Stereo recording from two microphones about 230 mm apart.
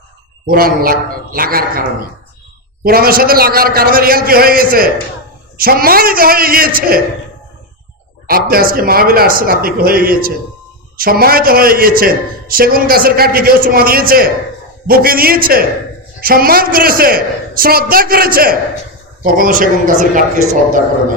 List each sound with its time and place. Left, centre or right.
0.4 s a man's voice: right
2.8 s a man's voice: right
8.3 s a man's voice: right